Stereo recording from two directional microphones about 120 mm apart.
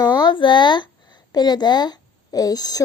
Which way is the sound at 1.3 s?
35° left (ahead or behind).